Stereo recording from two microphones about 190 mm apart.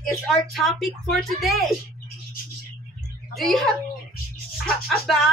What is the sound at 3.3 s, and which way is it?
Speech, centre (ahead or behind).